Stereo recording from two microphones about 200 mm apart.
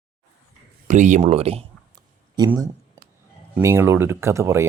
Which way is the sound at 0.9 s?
40° right (ahead or behind).